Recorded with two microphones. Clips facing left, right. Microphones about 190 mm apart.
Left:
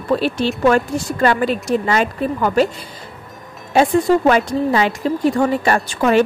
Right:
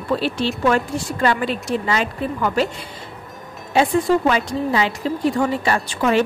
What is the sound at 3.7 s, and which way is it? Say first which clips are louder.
Speech: left 3 dB; 45° left (ahead or behind).